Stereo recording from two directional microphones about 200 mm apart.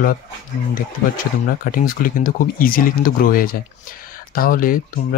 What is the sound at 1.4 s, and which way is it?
Speech, 45° left (ahead or behind).